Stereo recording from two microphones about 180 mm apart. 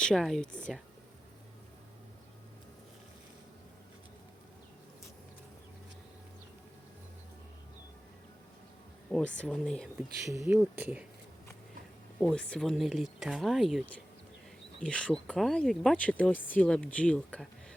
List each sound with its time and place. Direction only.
0.0 s speech: 5° left (ahead or behind)
9.4 s speech: 5° left (ahead or behind)
10.2 s speech: 15° right (ahead or behind)
12.2 s speech: 5° left (ahead or behind)